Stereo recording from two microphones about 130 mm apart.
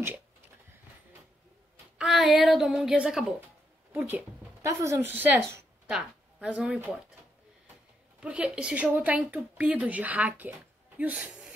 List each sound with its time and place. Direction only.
2.0 s a child's voice: centre (ahead or behind)
8.2 s speech: 10° right (ahead or behind)